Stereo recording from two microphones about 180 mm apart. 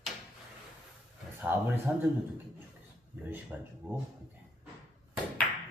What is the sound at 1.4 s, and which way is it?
Speech, 10° right (ahead or behind).